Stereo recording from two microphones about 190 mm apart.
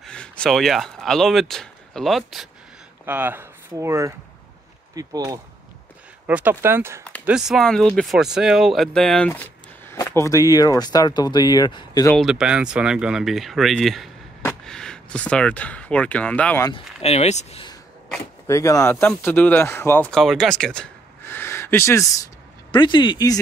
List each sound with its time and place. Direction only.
0.0 s speech: 5° left (ahead or behind)
12.2 s speech: 5° right (ahead or behind)
16.6 s speech: 30° left (ahead or behind)
18.5 s speech: 15° left (ahead or behind)